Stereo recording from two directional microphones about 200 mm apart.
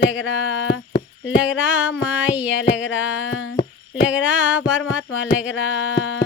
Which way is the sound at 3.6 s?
20° left (ahead or behind).